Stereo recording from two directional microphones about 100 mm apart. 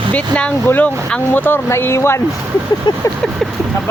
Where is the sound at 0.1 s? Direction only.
15° left (ahead or behind).